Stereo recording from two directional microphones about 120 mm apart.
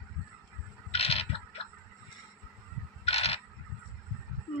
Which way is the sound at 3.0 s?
60° left (ahead or behind).